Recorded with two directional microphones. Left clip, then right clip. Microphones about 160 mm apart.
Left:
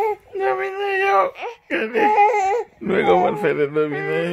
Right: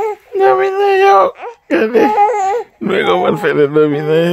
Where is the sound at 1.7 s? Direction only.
90° right.